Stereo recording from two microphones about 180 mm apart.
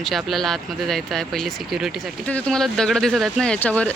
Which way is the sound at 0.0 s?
Centre (ahead or behind).